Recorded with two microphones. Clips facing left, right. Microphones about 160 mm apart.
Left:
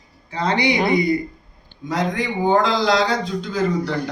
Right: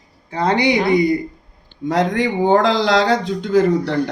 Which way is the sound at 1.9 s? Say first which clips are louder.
Right 5 dB; 90° right.